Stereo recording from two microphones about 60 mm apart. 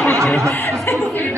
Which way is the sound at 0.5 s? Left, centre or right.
Left.